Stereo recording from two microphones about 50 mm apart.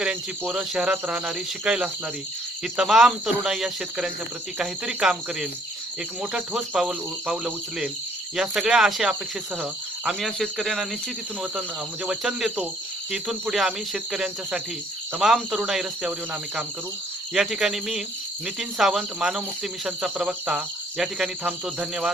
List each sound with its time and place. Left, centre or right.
0.0 s cricket: right
0.7 s speech: centre
2.9 s speech: centre
9.6 s cricket: centre
10.2 s cricket: centre
12.0 s speech: centre
17.3 s speech: centre